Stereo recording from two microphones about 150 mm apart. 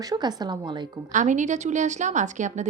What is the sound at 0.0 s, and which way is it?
Speech, 25° right (ahead or behind).